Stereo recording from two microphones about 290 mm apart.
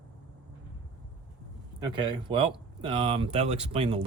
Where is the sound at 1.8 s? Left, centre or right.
Centre.